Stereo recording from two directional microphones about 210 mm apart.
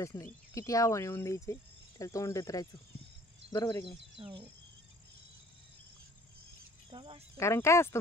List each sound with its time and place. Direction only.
0.0 s speech: 15° left (ahead or behind)
4.2 s speech: 25° right (ahead or behind)
6.9 s speech: 25° right (ahead or behind)
7.3 s speech: 15° left (ahead or behind)